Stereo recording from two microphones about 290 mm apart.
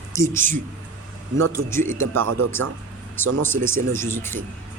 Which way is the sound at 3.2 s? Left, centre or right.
Centre.